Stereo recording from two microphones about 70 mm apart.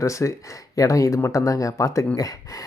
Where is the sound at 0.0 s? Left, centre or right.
Left.